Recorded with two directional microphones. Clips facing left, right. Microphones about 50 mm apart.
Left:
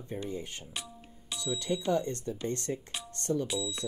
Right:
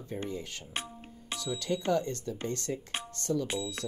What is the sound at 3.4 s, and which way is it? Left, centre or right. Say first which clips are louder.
Speech: even; right.